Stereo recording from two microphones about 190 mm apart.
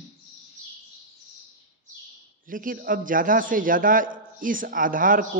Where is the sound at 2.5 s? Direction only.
45° right (ahead or behind).